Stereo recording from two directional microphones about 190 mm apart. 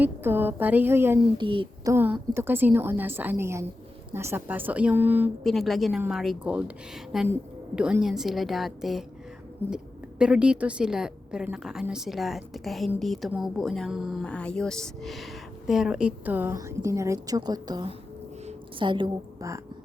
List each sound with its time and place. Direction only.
0.0 s a woman's voice: 10° right (ahead or behind)
1.4 s speech: 25° right (ahead or behind)
1.9 s a woman's voice: 10° right (ahead or behind)